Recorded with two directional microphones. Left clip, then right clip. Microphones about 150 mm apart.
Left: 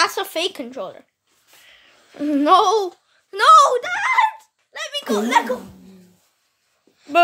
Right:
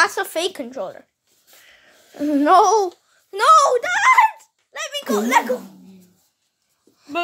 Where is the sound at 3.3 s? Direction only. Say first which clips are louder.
Left 2 dB; centre (ahead or behind).